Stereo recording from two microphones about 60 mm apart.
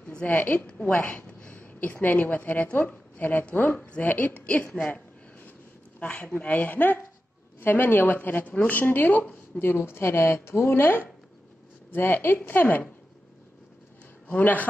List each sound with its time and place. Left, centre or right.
0.0 s a sound: left
0.3 s speech: left
0.7 s a woman's voice: centre
4.7 s a sound: left
5.9 s speech: centre
9.7 s speech: left
14.2 s a man's voice: left